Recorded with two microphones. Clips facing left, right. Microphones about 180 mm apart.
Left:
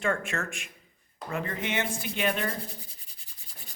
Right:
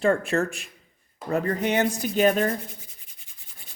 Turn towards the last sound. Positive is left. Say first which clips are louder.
# left 2 dB
turn(degrees=35)  # may be behind; listen again after turning